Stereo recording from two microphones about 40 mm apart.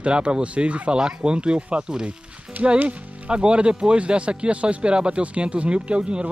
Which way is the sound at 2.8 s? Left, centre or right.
Right.